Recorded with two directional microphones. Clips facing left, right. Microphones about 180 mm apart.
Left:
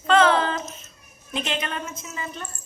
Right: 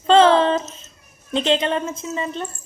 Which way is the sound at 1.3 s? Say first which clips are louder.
Right 9 dB; 30° right (ahead or behind).